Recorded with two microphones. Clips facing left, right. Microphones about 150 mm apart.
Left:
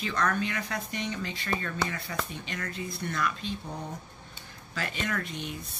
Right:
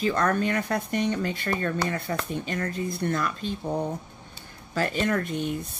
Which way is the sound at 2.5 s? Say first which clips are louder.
Right 5 dB; 35° right (ahead or behind).